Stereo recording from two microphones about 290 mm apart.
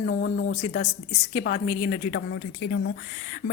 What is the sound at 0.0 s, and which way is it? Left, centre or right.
A woman's voice, left.